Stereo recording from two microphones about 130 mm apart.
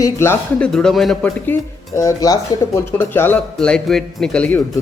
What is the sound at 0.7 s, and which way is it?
Speech, 5° left (ahead or behind).